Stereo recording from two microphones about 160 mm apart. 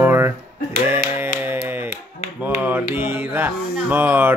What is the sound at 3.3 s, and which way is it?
Speech, 10° right (ahead or behind).